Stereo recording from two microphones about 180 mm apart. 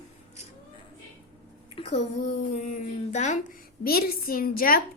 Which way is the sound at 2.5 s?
45° left (ahead or behind).